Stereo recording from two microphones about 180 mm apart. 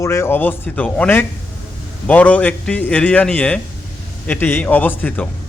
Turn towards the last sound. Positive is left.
turn(degrees=10)  # may be behind; listen again after turning